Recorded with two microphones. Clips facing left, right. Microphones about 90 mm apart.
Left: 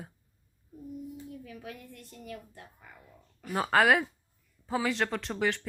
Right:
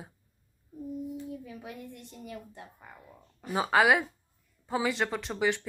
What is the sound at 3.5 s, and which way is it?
Speech, 5° right (ahead or behind).